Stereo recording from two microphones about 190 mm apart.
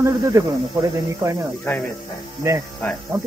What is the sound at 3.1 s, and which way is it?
Speech, 15° right (ahead or behind).